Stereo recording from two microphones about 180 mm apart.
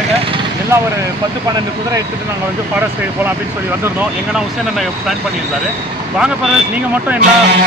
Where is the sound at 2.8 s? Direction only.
10° right (ahead or behind).